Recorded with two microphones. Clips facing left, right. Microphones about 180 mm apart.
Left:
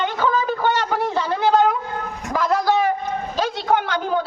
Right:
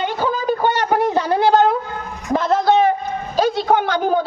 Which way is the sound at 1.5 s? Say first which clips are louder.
Right 2 dB; 30° right (ahead or behind).